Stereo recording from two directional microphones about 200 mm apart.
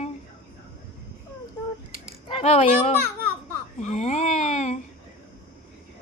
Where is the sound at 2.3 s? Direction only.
30° left (ahead or behind).